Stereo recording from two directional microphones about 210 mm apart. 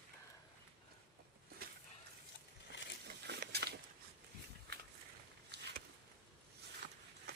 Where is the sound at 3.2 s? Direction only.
50° right (ahead or behind).